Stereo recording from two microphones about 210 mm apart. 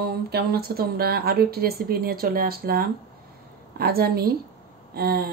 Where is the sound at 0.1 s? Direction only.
50° right (ahead or behind).